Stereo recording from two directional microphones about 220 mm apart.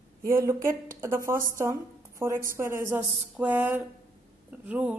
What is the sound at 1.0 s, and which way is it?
A woman's voice, 10° right (ahead or behind).